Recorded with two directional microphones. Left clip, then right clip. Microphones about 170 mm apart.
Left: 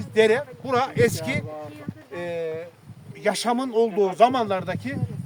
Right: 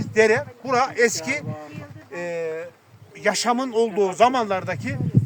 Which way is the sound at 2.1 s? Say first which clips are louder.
Right 2 dB; 5° right (ahead or behind).